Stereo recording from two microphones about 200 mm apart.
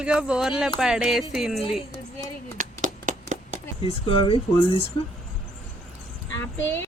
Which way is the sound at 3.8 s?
25° left (ahead or behind).